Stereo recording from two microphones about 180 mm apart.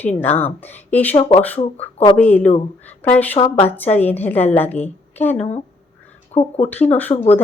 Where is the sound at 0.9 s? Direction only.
10° left (ahead or behind).